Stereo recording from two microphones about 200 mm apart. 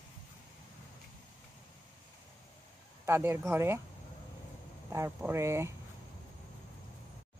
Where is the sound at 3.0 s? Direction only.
10° right (ahead or behind).